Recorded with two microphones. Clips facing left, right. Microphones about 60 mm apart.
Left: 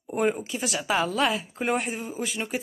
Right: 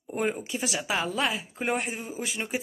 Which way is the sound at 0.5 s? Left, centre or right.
Centre.